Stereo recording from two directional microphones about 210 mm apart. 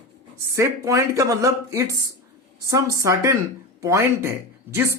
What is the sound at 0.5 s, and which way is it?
Speech, 15° right (ahead or behind).